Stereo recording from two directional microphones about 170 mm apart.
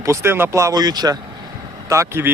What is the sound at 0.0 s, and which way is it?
Speech, 15° right (ahead or behind).